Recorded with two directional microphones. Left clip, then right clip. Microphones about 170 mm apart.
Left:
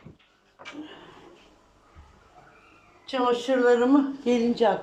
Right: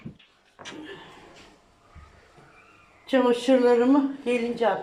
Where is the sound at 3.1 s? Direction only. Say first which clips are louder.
Right 3 dB; 45° right (ahead or behind).